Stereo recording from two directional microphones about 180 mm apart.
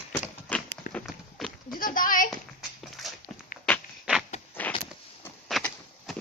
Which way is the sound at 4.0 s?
5° right (ahead or behind).